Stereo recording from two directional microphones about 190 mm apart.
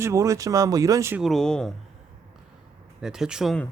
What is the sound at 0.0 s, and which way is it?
Speech, 15° right (ahead or behind).